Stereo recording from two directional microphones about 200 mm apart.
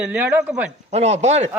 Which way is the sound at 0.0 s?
10° right (ahead or behind).